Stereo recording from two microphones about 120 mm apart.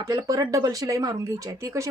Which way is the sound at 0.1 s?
35° right (ahead or behind).